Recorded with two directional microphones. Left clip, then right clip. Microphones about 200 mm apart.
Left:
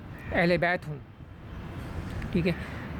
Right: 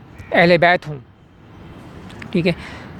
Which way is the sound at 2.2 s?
20° right (ahead or behind).